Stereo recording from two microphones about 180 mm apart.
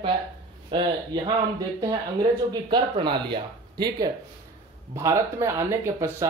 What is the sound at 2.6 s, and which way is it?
A man's voice, 25° right (ahead or behind).